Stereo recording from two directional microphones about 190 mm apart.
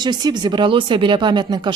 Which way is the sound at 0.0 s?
20° right (ahead or behind).